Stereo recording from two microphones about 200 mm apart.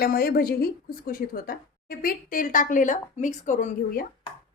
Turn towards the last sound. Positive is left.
turn(degrees=40)  # may be behind; listen again after turning